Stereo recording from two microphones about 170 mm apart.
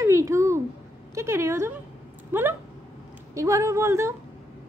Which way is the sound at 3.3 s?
15° right (ahead or behind).